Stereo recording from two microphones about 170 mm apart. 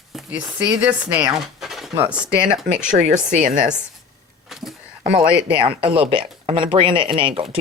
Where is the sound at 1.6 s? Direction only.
Centre (ahead or behind).